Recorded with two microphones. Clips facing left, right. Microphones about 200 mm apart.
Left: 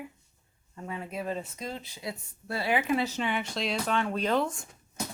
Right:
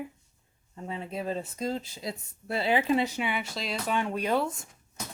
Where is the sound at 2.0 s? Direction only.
25° right (ahead or behind).